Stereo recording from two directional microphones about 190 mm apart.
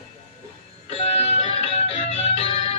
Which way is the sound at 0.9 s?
35° left (ahead or behind).